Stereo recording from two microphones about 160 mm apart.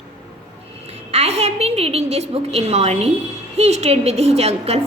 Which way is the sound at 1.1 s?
40° right (ahead or behind).